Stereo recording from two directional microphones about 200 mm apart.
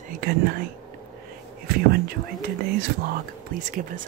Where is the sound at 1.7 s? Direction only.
50° right (ahead or behind).